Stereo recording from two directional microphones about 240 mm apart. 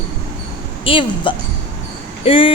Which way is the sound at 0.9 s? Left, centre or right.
Left.